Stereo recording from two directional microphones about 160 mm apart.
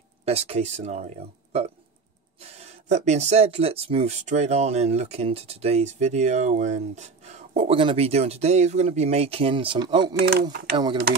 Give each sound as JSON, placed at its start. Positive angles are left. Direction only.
{"t": 0.2, "sound": "speech", "side_deg": -40}
{"t": 10.1, "sound": "speech", "side_deg": -85}